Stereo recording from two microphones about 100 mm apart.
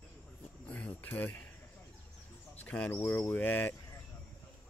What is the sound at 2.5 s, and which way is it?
Bird, 15° left (ahead or behind).